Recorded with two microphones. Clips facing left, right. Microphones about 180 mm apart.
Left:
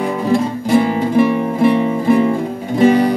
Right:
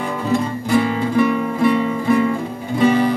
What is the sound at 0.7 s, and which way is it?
Music, 25° left (ahead or behind).